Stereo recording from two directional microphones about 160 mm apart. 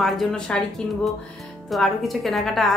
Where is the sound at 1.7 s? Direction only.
Centre (ahead or behind).